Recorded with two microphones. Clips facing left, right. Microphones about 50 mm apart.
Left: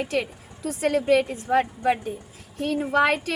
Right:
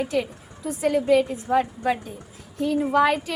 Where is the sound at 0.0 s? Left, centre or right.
Left.